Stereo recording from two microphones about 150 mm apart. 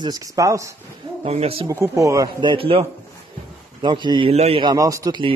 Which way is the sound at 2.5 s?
40° right (ahead or behind).